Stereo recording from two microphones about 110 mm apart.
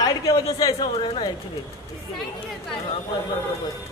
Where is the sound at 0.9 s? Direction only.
55° left (ahead or behind).